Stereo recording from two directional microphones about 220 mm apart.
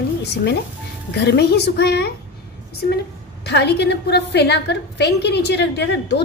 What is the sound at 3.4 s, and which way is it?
A woman's voice, 50° left (ahead or behind).